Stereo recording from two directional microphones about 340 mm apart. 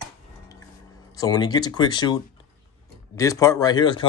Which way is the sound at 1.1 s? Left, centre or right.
Centre.